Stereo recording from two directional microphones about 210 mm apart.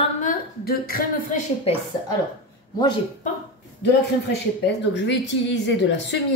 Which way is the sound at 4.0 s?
55° left (ahead or behind).